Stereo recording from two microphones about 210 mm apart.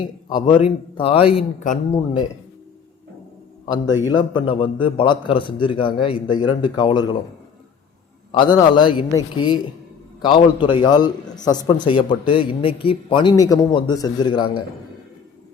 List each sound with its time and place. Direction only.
0.3 s a man's voice: 20° left (ahead or behind)
4.0 s a man's voice: 20° left (ahead or behind)
8.5 s a man's voice: 20° left (ahead or behind)